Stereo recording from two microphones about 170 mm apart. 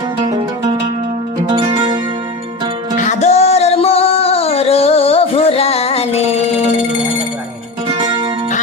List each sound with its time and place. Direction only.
1.5 s music: 30° right (ahead or behind)
3.0 s singing: 45° left (ahead or behind)
7.9 s music: 25° right (ahead or behind)